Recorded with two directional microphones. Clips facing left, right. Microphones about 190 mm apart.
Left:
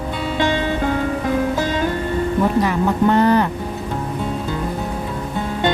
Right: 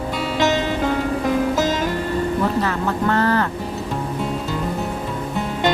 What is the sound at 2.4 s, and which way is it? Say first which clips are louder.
Speech: left 3 dB; 15° left (ahead or behind).